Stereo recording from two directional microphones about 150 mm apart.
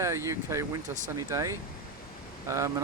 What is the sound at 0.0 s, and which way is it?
Speech, 20° right (ahead or behind).